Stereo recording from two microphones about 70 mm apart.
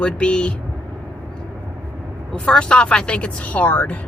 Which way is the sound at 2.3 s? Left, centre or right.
Centre.